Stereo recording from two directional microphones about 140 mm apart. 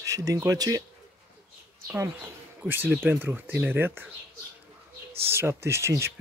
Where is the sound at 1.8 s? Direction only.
15° right (ahead or behind).